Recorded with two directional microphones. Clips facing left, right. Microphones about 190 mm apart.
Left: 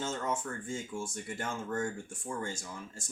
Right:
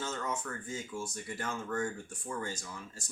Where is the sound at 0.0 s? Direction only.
25° left (ahead or behind).